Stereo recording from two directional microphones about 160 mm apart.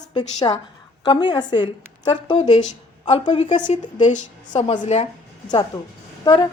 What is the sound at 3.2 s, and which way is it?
A woman's voice, 45° left (ahead or behind).